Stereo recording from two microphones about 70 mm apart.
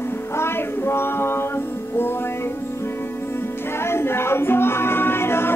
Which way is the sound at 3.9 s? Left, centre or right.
Left.